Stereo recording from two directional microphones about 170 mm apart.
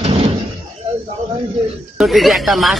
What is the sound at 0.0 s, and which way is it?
Door, 35° right (ahead or behind).